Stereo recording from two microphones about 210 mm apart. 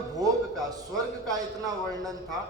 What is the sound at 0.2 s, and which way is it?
A man's voice, 15° right (ahead or behind).